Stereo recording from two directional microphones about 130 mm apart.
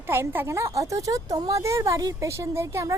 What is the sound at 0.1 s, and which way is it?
Speech, 20° right (ahead or behind).